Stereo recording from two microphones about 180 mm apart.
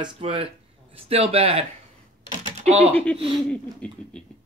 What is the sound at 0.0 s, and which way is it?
Speech, 30° right (ahead or behind).